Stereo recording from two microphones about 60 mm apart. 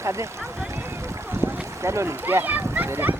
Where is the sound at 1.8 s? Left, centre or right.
Right.